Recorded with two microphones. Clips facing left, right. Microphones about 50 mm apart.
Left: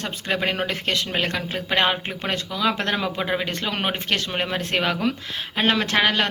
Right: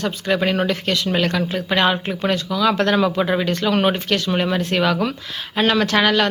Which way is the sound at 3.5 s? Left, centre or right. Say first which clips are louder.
Right 7 dB; left.